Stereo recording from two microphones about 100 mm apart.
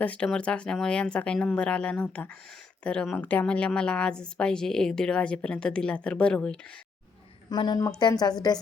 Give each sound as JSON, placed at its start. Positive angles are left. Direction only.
{"t": 0.0, "sound": "a woman's voice", "side_deg": 15}
{"t": 7.5, "sound": "a woman's voice", "side_deg": 50}